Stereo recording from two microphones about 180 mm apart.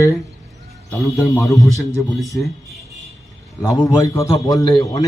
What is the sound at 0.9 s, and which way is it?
Speech, 15° left (ahead or behind).